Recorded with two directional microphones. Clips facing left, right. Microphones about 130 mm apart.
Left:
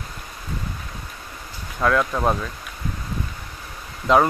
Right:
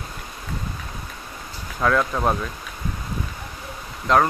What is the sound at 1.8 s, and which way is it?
Speech, centre (ahead or behind).